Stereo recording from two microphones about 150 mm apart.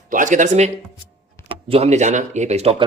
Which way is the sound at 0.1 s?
60° right (ahead or behind).